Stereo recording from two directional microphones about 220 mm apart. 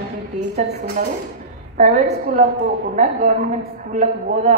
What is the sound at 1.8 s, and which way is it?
A woman's voice, 40° right (ahead or behind).